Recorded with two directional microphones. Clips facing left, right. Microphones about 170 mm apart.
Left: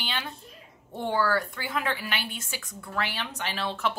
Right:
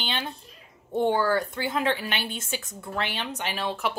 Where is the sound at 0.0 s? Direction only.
25° right (ahead or behind).